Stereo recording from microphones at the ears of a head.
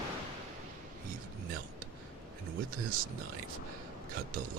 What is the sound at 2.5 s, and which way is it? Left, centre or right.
Speech, right.